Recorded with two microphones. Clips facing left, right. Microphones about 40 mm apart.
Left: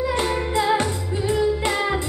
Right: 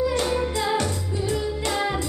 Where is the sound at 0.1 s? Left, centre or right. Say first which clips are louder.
Left 2 dB; left.